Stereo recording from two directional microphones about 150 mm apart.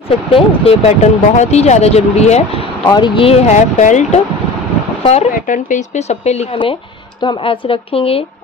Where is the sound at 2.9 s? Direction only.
35° left (ahead or behind).